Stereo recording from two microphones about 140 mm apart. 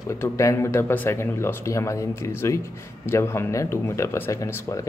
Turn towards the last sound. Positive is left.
turn(degrees=25)  # may be behind; listen again after turning